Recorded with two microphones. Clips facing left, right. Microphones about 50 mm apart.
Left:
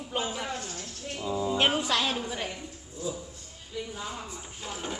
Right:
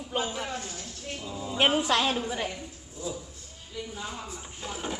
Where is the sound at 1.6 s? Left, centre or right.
Centre.